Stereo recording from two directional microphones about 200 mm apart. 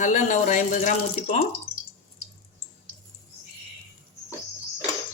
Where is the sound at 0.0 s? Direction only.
40° left (ahead or behind).